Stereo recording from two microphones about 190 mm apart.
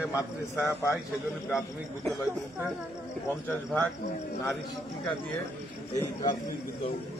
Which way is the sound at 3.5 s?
10° left (ahead or behind).